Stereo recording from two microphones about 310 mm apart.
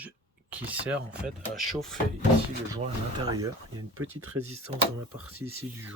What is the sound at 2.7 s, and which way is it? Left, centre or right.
Speech, centre.